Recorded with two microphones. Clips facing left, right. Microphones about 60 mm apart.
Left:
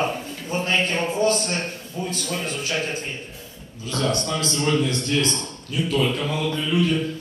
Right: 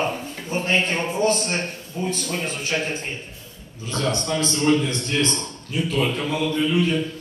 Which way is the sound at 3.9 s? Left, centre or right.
Right.